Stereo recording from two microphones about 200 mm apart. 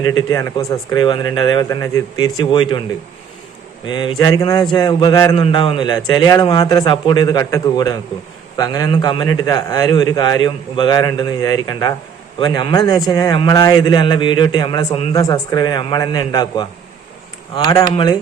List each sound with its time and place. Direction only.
0.0 s a man's voice: 20° left (ahead or behind)
3.8 s a man's voice: 20° left (ahead or behind)